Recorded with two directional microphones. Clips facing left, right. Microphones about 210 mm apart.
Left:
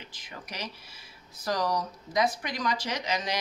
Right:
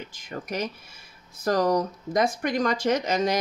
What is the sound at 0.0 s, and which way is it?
A woman's voice, 45° right (ahead or behind).